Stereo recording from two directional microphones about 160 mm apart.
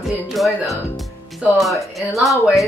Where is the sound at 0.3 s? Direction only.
Centre (ahead or behind).